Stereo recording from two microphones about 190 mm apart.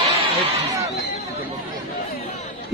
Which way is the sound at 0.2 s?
25° right (ahead or behind).